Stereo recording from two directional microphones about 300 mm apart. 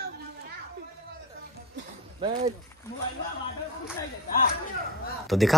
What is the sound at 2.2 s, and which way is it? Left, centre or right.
Speech, right.